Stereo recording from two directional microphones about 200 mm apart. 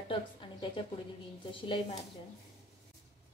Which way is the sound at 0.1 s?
25° left (ahead or behind).